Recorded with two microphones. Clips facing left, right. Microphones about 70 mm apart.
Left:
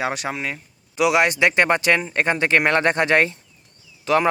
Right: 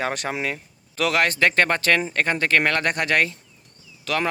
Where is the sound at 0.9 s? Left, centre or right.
Centre.